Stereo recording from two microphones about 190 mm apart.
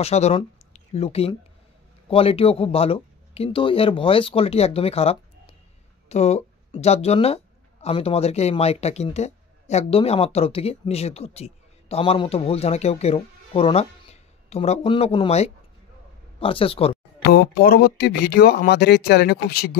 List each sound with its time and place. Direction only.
0.0 s speech: 35° left (ahead or behind)
17.2 s speech: 55° left (ahead or behind)